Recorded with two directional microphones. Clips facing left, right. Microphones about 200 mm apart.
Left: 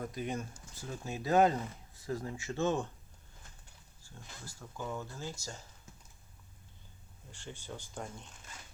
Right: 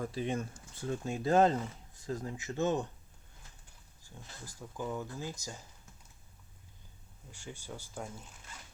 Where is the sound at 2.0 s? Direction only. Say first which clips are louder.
Even; 20° right (ahead or behind).